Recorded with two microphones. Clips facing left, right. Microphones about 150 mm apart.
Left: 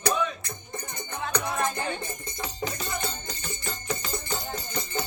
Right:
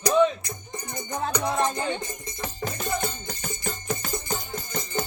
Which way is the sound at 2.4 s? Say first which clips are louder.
Right 2 dB; 50° right (ahead or behind).